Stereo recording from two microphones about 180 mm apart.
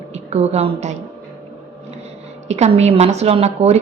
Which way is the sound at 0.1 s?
35° right (ahead or behind).